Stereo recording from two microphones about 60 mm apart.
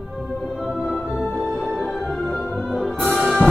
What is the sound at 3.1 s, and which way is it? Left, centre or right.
Music, centre.